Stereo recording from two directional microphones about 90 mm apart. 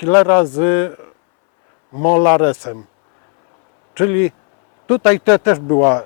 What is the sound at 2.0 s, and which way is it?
Speech, 15° left (ahead or behind).